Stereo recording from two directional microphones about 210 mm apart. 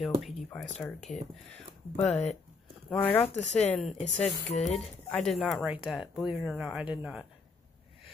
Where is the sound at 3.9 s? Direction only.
30° left (ahead or behind).